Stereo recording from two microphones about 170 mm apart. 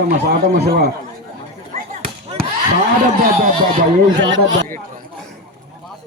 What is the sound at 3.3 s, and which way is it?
Speech, 55° right (ahead or behind).